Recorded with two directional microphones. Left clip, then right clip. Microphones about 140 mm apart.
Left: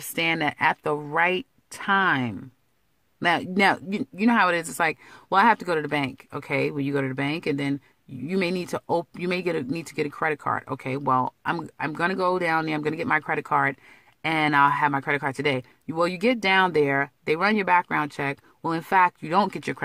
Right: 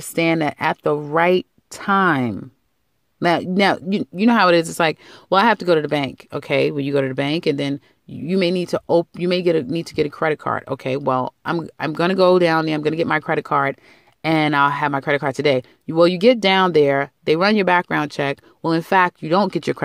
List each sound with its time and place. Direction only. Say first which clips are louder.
0.0 s speech: right 5 dB; 40° right (ahead or behind)
0.8 s speech: right 7 dB; 25° right (ahead or behind)
1.1 s speech: right 6 dB; 40° right (ahead or behind)
3.2 s speech: right 4 dB; 35° right (ahead or behind)